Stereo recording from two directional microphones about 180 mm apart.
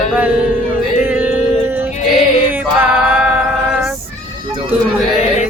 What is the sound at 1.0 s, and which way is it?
Music, 10° right (ahead or behind).